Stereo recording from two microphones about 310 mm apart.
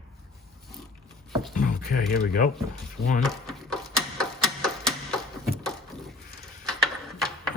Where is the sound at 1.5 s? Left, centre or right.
Left.